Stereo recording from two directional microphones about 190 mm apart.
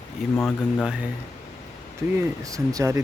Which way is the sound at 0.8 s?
5° right (ahead or behind).